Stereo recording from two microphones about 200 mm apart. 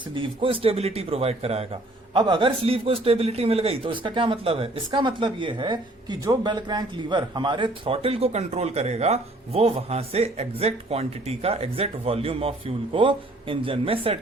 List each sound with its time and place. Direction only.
0.1 s speech: 25° right (ahead or behind)